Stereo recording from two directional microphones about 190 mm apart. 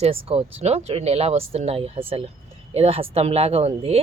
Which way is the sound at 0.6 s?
35° right (ahead or behind).